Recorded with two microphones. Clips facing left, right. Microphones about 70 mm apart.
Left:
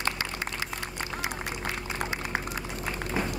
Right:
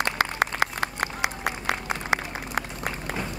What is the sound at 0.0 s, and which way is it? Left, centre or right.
Applause, right.